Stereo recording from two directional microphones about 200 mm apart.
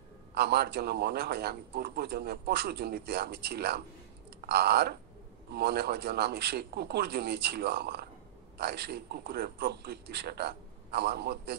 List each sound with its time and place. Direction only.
0.3 s a man's voice: 55° right (ahead or behind)